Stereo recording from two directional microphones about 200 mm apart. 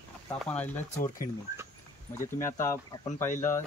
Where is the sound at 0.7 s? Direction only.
40° left (ahead or behind).